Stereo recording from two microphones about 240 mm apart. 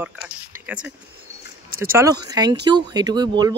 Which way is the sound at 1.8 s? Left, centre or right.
Centre.